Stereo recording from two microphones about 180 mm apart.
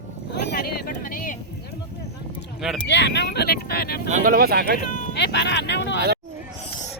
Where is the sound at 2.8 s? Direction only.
70° left (ahead or behind).